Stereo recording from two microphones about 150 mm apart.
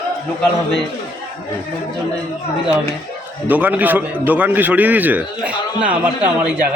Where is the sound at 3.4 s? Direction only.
10° right (ahead or behind).